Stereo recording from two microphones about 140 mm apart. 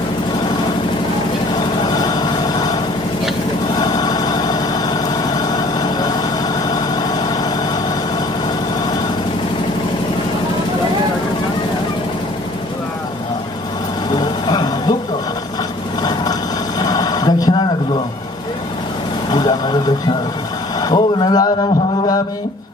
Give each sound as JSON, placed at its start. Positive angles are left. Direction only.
{"t": 1.5, "sound": "vehicle", "side_deg": 30}
{"t": 3.8, "sound": "vehicle", "side_deg": 30}
{"t": 14.1, "sound": "vehicle", "side_deg": 30}
{"t": 16.0, "sound": "vehicle", "side_deg": 30}
{"t": 16.8, "sound": "a sound", "side_deg": 30}
{"t": 20.8, "sound": "a sound", "side_deg": 30}